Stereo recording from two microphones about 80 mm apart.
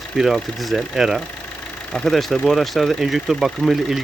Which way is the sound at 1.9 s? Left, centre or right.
Centre.